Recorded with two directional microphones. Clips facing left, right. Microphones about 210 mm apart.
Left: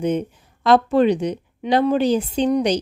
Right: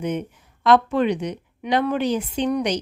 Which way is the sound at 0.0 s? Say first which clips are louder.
Left 5 dB; 30° left (ahead or behind).